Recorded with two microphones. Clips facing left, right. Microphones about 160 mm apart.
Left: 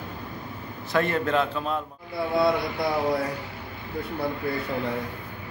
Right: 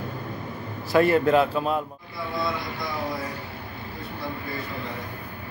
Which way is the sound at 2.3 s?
65° left (ahead or behind).